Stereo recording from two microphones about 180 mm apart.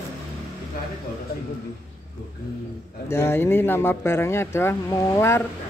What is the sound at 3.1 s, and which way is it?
A man's voice, 15° left (ahead or behind).